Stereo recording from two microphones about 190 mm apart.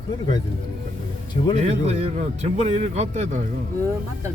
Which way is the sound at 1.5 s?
35° right (ahead or behind).